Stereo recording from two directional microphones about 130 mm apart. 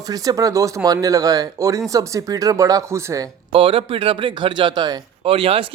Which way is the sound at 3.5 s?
45° right (ahead or behind).